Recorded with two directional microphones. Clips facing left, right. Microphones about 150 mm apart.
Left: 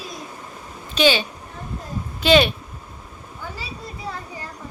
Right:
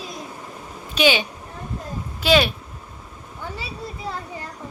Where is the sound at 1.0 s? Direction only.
15° right (ahead or behind).